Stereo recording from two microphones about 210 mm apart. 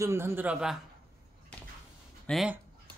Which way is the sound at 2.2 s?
5° right (ahead or behind).